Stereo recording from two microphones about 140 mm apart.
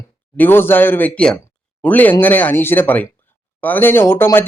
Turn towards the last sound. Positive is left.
turn(degrees=15)  # may be behind; listen again after turning